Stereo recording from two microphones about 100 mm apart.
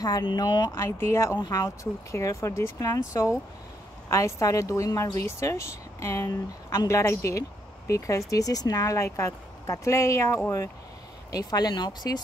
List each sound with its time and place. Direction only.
0.0 s speech: 45° left (ahead or behind)
0.7 s speech: 25° left (ahead or behind); by 12.2 s 40° left (ahead or behind)